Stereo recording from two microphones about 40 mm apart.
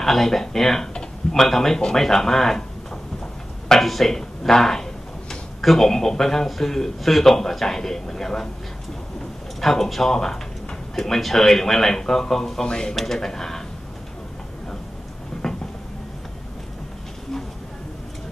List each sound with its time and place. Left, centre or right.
0.0 s speech: centre
0.9 s a sound: centre
2.0 s speech: centre
3.8 s speech: centre
9.6 s speech: centre
15.4 s a sound: centre